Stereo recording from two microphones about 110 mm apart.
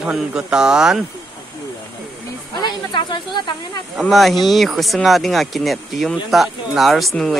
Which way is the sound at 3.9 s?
Centre (ahead or behind).